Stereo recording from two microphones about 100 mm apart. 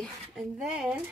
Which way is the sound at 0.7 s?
5° right (ahead or behind).